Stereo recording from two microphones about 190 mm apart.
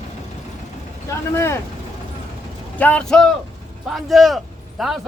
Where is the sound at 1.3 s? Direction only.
15° left (ahead or behind).